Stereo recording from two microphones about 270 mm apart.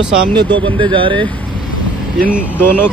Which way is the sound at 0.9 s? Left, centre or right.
Centre.